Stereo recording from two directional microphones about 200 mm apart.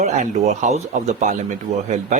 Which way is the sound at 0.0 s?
35° right (ahead or behind).